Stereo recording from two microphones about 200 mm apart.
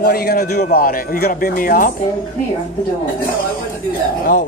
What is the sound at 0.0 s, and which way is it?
Speech, 50° left (ahead or behind).